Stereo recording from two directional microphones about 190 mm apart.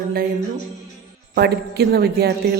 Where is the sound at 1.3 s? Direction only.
55° right (ahead or behind).